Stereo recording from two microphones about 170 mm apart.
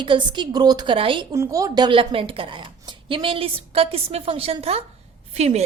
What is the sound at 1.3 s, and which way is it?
A woman's voice, 20° right (ahead or behind).